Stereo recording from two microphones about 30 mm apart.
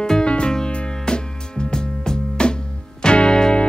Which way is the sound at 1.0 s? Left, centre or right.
Left.